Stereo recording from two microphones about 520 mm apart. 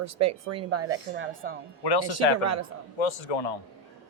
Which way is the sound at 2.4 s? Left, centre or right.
Right.